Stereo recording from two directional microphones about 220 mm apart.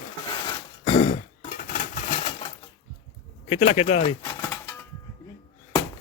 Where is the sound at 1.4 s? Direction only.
35° left (ahead or behind).